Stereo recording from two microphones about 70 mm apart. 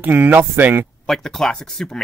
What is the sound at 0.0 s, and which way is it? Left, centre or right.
Speech, right.